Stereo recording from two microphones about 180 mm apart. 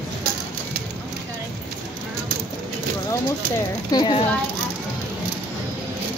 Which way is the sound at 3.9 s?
25° left (ahead or behind).